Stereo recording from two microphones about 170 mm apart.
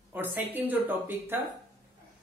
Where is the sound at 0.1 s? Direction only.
10° right (ahead or behind).